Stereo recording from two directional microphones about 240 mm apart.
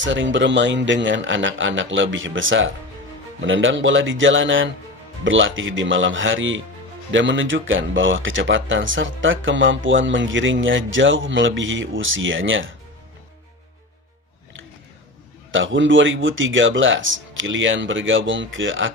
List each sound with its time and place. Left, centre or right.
0.0 s speech: right
15.5 s speech: right